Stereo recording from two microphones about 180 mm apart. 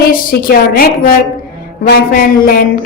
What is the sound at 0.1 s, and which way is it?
A woman's voice, 55° left (ahead or behind).